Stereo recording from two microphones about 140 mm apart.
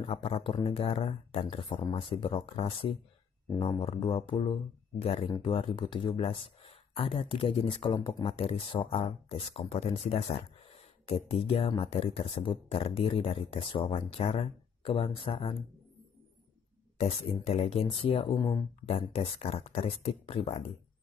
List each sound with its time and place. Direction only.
0.0 s speech: 40° left (ahead or behind)
17.0 s speech: 45° left (ahead or behind)
18.9 s speech: 45° left (ahead or behind)